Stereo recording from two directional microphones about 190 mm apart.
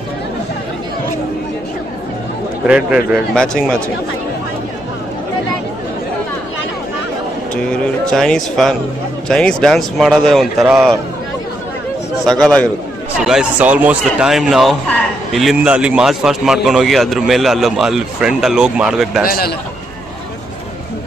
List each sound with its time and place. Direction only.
2.6 s speech: 5° right (ahead or behind)
7.5 s speech: 5° left (ahead or behind)
12.3 s speech: 5° left (ahead or behind)
19.2 s a man's voice: 50° left (ahead or behind)